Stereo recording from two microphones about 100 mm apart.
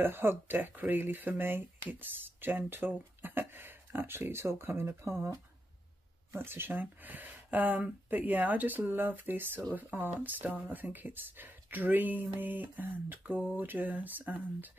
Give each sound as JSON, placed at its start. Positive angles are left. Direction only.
{"t": 0.0, "sound": "speech", "side_deg": -20}